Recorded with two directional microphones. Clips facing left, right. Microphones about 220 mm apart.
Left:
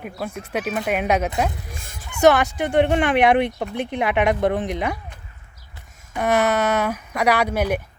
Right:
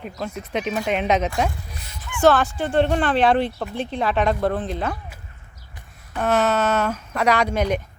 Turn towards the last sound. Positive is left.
turn(degrees=10)  # may be behind; listen again after turning